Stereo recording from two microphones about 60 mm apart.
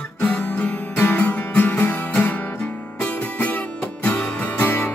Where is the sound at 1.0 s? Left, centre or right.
Left.